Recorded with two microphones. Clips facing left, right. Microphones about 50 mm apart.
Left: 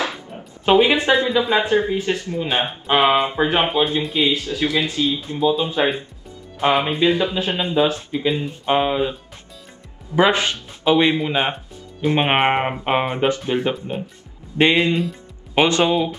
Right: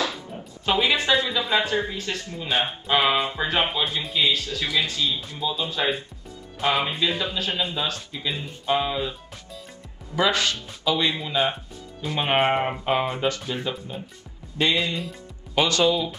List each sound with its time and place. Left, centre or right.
0.7 s speech: left
10.1 s speech: left